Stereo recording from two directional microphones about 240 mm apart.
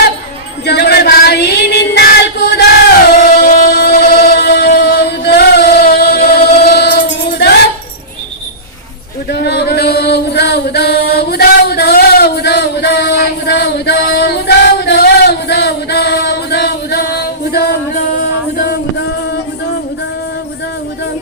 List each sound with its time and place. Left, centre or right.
0.6 s female singing: left
3.3 s music: left
9.3 s chant: left